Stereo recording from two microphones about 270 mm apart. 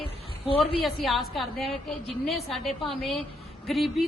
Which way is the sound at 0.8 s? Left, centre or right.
Centre.